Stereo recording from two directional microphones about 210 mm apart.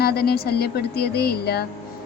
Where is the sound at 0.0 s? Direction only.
50° left (ahead or behind).